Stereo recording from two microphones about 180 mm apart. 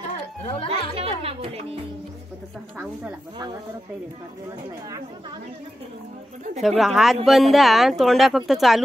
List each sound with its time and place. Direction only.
0.4 s music: 30° left (ahead or behind)
0.9 s speech: 30° right (ahead or behind)
6.6 s speech: centre (ahead or behind)